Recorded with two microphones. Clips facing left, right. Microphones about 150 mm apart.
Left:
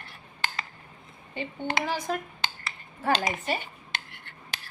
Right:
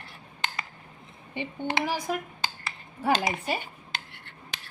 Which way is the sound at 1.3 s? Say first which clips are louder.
Right 1 dB; 15° right (ahead or behind).